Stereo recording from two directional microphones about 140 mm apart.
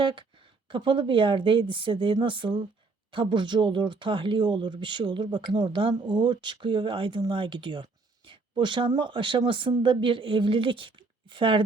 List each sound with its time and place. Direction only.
0.0 s speech: 35° right (ahead or behind)